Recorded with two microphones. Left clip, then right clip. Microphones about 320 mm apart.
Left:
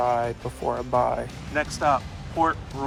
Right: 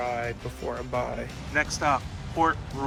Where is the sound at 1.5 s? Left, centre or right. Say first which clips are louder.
Left 2 dB; centre.